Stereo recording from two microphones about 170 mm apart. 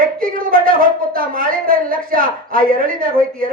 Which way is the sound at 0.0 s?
55° right (ahead or behind).